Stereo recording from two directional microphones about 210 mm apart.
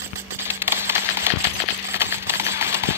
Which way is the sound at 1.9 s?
10° right (ahead or behind).